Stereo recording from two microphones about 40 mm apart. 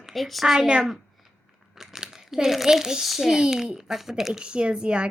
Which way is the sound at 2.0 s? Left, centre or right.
Centre.